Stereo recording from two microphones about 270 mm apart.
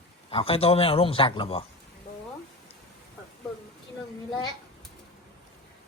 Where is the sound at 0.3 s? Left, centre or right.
Left.